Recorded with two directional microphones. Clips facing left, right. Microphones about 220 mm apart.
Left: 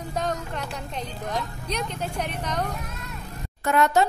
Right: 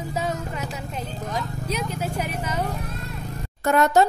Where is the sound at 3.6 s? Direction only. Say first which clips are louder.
Right 3 dB; 40° right (ahead or behind).